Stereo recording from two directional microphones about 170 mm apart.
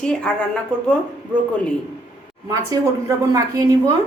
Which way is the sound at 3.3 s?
20° right (ahead or behind).